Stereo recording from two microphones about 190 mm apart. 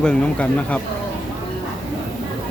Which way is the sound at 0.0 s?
5° left (ahead or behind).